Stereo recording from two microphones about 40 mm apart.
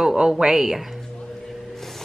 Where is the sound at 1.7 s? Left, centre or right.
Centre.